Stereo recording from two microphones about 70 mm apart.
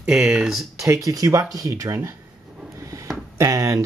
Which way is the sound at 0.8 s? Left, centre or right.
Right.